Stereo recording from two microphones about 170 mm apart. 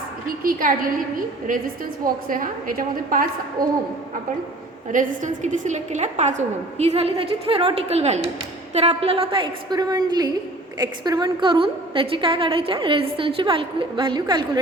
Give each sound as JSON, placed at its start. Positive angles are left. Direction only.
{"t": 0.4, "sound": "a woman's voice", "side_deg": -55}
{"t": 4.9, "sound": "a woman's voice", "side_deg": -50}